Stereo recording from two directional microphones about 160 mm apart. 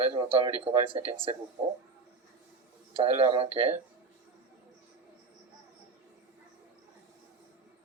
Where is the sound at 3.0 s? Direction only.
35° right (ahead or behind).